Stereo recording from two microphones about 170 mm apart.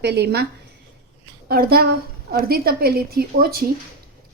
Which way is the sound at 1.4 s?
65° right (ahead or behind).